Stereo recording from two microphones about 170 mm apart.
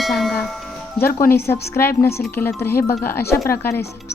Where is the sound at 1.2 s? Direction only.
15° left (ahead or behind).